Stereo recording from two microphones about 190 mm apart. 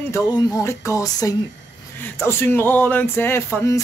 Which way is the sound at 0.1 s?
20° left (ahead or behind).